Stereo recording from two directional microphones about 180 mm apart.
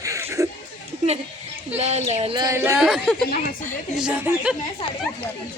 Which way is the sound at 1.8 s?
40° right (ahead or behind).